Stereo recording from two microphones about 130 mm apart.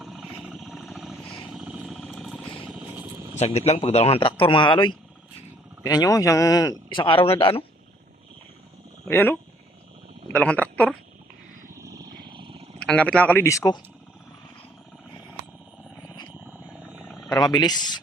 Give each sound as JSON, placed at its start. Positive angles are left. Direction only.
{"t": 0.0, "sound": "vehicle", "side_deg": -5}
{"t": 3.3, "sound": "a man's voice", "side_deg": 55}
{"t": 9.0, "sound": "speech", "side_deg": 15}
{"t": 11.8, "sound": "a sound", "side_deg": -25}
{"t": 12.8, "sound": "speech", "side_deg": 5}
{"t": 16.9, "sound": "a sound", "side_deg": 0}
{"t": 17.3, "sound": "speech", "side_deg": 35}